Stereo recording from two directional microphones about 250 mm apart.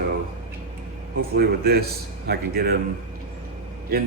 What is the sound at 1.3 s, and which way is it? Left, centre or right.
A man's voice, right.